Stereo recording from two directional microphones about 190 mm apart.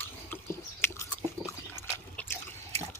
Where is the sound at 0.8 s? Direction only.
15° left (ahead or behind).